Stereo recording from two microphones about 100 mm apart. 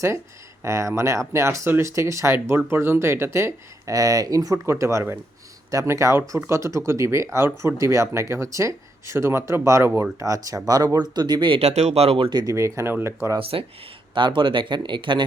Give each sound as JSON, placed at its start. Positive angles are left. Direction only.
{"t": 0.6, "sound": "speech", "side_deg": -30}
{"t": 12.5, "sound": "speech", "side_deg": -30}
{"t": 14.1, "sound": "speech", "side_deg": -55}